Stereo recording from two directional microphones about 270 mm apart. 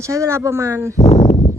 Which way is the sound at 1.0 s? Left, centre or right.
Left.